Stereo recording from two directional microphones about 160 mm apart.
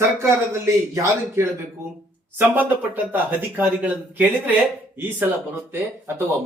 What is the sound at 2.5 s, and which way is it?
Speech, 10° right (ahead or behind).